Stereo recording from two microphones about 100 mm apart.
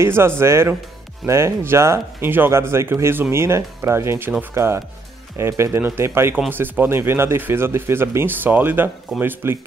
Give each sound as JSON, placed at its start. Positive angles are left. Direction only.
{"t": 0.0, "sound": "speech", "side_deg": -25}